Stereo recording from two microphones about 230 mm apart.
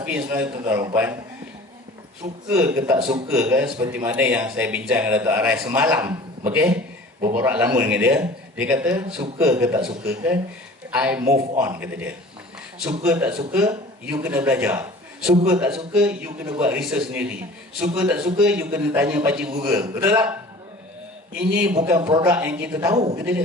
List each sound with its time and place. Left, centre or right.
0.0 s a man's voice: centre
2.5 s a man's voice: centre
11.2 s a man's voice: right
11.6 s a man's voice: centre
21.4 s a man's voice: centre